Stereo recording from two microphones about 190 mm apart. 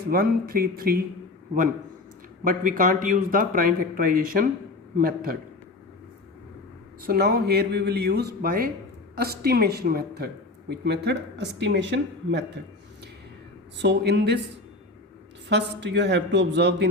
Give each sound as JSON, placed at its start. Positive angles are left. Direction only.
{"t": 0.1, "sound": "speech", "side_deg": -50}
{"t": 2.4, "sound": "speech", "side_deg": -45}
{"t": 7.0, "sound": "speech", "side_deg": -55}
{"t": 13.7, "sound": "speech", "side_deg": -60}
{"t": 15.4, "sound": "speech", "side_deg": -65}